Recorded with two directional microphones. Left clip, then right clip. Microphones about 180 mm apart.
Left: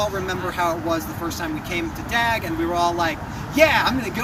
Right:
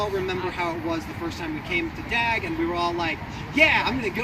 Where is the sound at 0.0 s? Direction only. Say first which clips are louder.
Left 2 dB; 15° left (ahead or behind).